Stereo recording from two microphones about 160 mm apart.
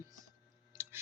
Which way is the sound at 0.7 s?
15° right (ahead or behind).